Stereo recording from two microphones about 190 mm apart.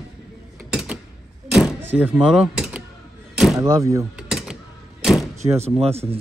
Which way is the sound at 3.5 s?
15° right (ahead or behind).